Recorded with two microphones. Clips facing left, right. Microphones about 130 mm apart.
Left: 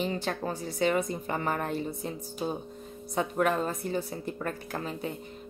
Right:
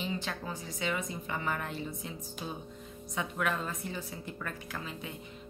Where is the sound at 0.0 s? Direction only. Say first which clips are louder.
Left 6 dB; 45° left (ahead or behind).